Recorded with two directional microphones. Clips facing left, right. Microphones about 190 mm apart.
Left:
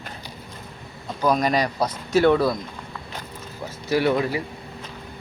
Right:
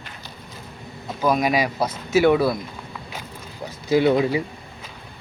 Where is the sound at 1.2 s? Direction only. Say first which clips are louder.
Right 1 dB; 5° right (ahead or behind).